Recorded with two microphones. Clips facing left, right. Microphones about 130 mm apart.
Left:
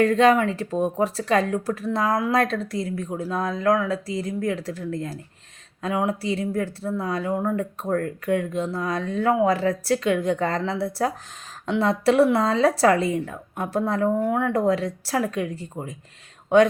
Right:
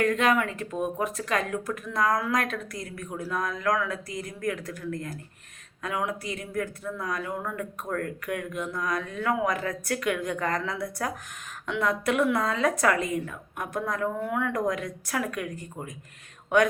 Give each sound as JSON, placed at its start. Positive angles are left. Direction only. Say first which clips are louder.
{"t": 0.0, "sound": "speech", "louder": "left 6 dB", "side_deg": 30}